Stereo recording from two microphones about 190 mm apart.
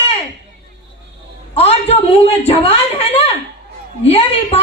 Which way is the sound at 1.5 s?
30° left (ahead or behind).